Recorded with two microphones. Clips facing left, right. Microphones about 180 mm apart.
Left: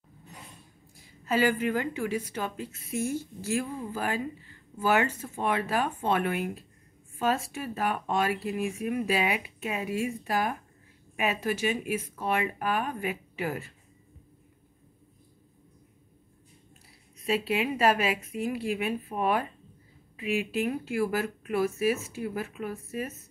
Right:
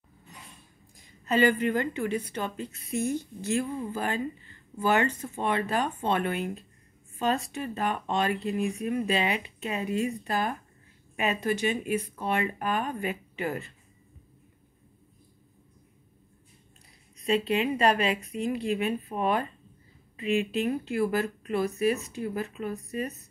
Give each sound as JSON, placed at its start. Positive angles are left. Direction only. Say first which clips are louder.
{"t": 0.9, "sound": "a woman's voice", "louder": "right 2 dB", "side_deg": 5}
{"t": 17.2, "sound": "a woman's voice", "louder": "right 2 dB", "side_deg": 5}